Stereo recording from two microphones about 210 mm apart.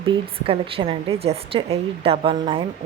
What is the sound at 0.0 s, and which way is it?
A woman's voice, 25° right (ahead or behind).